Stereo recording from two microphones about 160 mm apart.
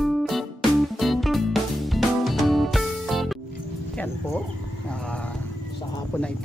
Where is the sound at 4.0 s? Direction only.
10° left (ahead or behind).